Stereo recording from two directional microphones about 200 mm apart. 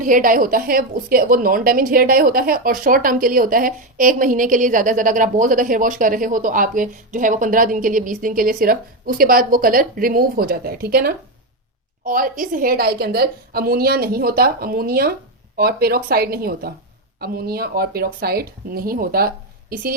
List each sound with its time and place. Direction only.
0.0 s a woman's voice: 40° right (ahead or behind)